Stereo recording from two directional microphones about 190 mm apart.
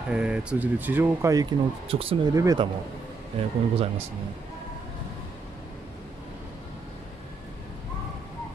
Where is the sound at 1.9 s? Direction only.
30° right (ahead or behind).